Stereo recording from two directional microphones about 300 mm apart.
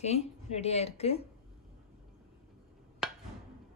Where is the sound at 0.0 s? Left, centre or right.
Left.